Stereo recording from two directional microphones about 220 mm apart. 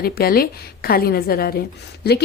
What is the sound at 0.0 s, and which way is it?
A woman's voice, 45° left (ahead or behind).